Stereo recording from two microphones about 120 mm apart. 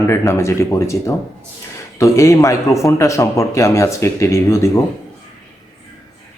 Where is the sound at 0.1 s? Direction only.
25° left (ahead or behind).